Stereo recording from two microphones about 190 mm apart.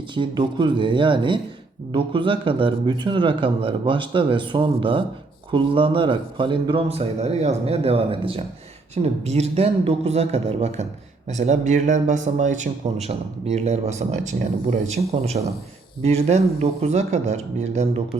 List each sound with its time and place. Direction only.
0.1 s speech: 25° right (ahead or behind)